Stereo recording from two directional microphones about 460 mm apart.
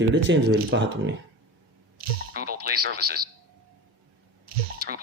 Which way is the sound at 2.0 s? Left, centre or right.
Centre.